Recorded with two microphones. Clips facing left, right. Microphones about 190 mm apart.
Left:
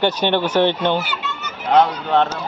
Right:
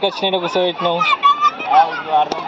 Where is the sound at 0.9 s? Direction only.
90° right.